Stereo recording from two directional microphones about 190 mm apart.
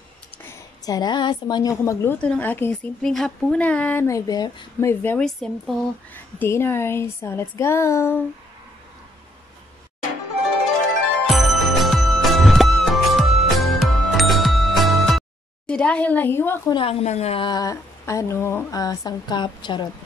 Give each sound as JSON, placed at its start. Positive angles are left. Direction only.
{"t": 0.4, "sound": "a woman's voice", "side_deg": 15}
{"t": 11.2, "sound": "music", "side_deg": 0}
{"t": 16.7, "sound": "speech", "side_deg": 35}